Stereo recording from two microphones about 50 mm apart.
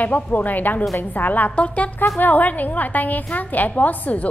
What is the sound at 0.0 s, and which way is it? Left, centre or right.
A woman's voice, left.